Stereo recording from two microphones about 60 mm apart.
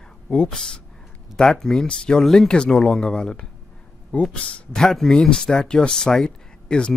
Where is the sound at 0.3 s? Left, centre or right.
Centre.